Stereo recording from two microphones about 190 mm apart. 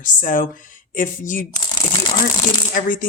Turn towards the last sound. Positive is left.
turn(degrees=45)  # may be behind; listen again after turning